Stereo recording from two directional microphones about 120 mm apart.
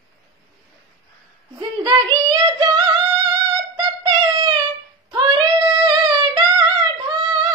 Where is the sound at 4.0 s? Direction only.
40° right (ahead or behind).